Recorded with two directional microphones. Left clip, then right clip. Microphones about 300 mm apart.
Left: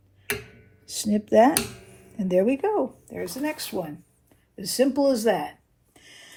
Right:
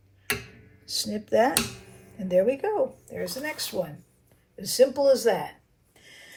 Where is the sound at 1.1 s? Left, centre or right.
Left.